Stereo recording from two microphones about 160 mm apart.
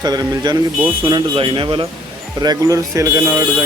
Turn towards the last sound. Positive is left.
turn(degrees=-15)  # may be behind; listen again after turning